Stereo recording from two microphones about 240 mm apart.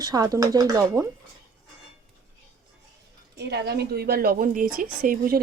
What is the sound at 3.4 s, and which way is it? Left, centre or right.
A woman's voice, right.